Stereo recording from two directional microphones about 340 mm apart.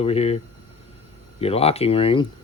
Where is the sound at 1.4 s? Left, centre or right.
Centre.